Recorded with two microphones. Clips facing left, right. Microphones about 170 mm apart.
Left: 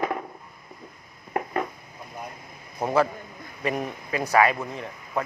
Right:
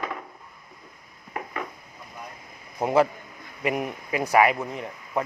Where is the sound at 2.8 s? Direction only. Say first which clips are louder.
Right 2 dB; 20° right (ahead or behind).